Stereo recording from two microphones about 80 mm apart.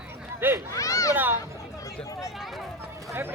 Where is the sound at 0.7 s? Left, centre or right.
Left.